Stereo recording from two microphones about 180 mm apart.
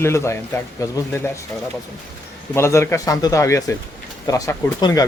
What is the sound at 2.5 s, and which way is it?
A man's voice, 15° left (ahead or behind).